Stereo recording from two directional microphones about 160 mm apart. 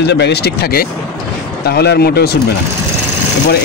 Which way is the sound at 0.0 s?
90° left.